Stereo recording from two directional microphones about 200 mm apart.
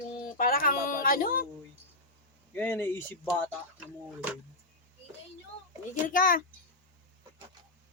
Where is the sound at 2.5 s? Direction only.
10° left (ahead or behind).